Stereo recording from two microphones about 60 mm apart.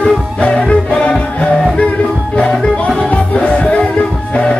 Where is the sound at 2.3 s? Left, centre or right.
Left.